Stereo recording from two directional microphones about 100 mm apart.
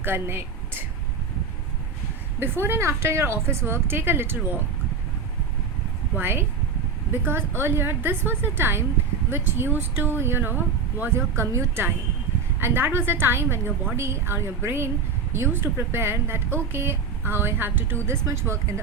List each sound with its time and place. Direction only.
0.0 s a sound: 25° right (ahead or behind)
2.4 s speech: 20° right (ahead or behind)
6.1 s speech: 20° right (ahead or behind)